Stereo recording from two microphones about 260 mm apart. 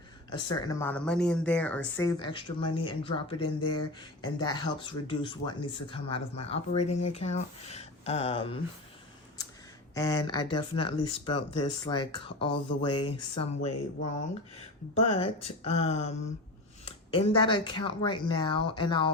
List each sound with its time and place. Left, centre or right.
0.3 s speech: centre
9.9 s speech: centre